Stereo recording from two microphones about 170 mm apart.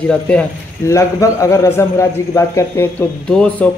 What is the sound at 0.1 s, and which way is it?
A man's voice, 10° left (ahead or behind).